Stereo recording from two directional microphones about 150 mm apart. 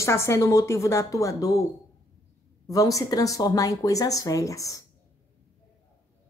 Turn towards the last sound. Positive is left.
turn(degrees=20)  # may be behind; listen again after turning